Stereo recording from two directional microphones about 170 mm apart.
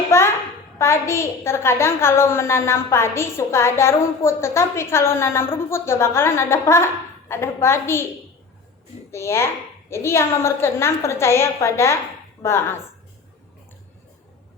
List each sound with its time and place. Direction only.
0.1 s a sound: 15° left (ahead or behind)
0.8 s a woman's voice: 15° left (ahead or behind)
9.1 s a woman's voice: 15° left (ahead or behind)